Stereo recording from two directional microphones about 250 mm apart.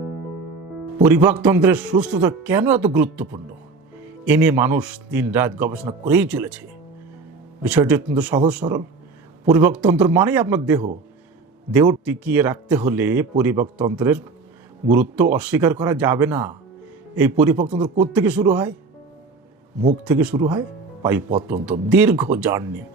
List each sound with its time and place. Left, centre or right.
1.0 s a man's voice: centre
8.6 s a man's voice: right
9.5 s speech: centre
18.1 s a man's voice: centre
20.1 s a man's voice: centre